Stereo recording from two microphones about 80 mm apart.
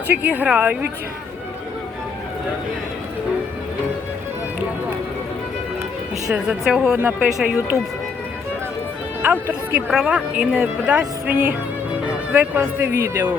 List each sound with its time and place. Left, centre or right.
0.1 s speech: right
6.3 s speech: centre
9.2 s speech: right